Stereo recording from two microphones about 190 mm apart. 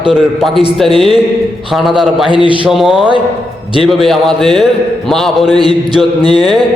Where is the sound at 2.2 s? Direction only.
25° right (ahead or behind).